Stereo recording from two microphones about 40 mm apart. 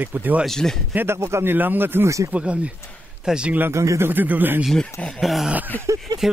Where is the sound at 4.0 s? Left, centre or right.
Right.